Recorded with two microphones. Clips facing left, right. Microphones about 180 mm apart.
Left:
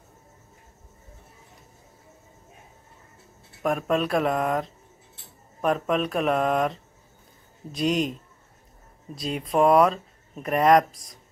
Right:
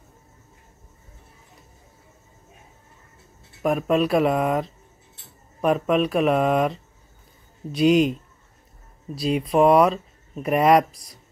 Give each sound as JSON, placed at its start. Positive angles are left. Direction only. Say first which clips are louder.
{"t": 3.6, "sound": "speech", "louder": "right 4 dB", "side_deg": -5}
{"t": 9.1, "sound": "speech", "louder": "right 5 dB", "side_deg": -5}